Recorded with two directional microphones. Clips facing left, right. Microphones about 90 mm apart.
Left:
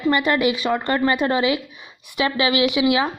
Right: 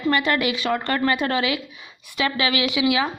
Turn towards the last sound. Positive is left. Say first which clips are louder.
# left 3 dB
turn(degrees=25)  # may be behind; listen again after turning